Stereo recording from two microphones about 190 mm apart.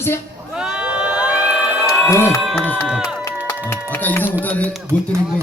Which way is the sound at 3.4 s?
10° left (ahead or behind).